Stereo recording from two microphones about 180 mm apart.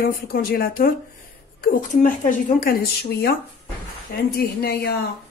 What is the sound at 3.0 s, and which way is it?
Speech, 60° left (ahead or behind).